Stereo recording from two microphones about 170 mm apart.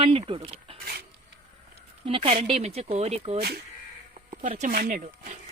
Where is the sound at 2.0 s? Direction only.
35° right (ahead or behind).